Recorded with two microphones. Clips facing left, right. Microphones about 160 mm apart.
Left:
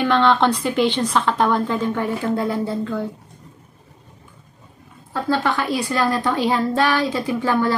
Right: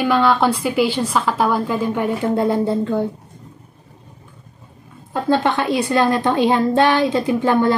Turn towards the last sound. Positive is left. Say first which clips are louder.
# right 4 dB
turn(degrees=-20)  # may be behind; listen again after turning